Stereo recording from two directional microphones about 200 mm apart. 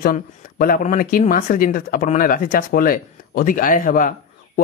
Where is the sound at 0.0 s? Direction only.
45° left (ahead or behind).